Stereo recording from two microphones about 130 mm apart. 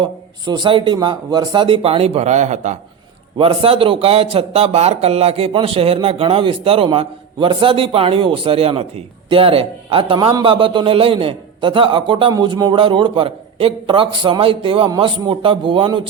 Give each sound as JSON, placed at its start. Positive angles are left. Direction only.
{"t": 0.0, "sound": "a man's voice", "side_deg": -35}
{"t": 3.3, "sound": "a man's voice", "side_deg": -45}